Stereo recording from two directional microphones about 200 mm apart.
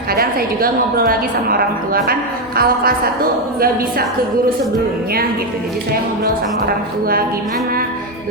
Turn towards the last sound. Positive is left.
turn(degrees=-50)  # may be behind; listen again after turning